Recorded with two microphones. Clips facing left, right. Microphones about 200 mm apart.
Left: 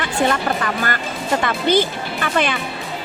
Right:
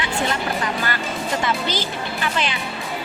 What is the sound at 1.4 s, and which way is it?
A woman's voice, 55° left (ahead or behind).